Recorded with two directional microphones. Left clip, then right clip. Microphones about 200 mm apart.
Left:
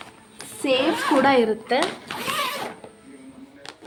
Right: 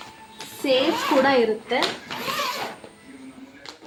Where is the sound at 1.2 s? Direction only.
35° left (ahead or behind).